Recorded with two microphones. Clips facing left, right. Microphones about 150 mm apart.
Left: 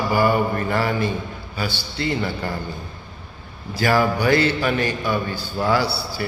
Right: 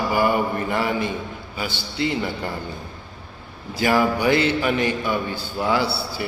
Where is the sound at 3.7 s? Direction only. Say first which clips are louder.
Even; 20° right (ahead or behind).